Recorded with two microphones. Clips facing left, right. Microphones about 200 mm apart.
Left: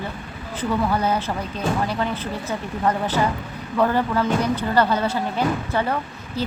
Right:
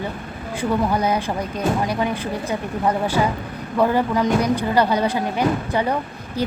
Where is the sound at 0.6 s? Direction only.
15° right (ahead or behind).